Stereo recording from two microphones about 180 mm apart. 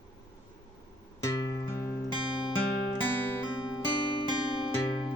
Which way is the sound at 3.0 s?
10° left (ahead or behind).